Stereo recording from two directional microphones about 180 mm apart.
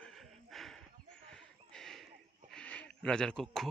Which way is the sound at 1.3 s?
5° left (ahead or behind).